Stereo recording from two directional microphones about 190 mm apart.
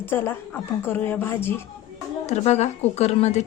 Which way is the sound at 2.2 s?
35° left (ahead or behind).